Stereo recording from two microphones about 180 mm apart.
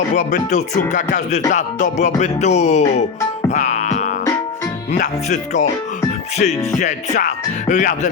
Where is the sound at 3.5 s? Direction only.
40° left (ahead or behind).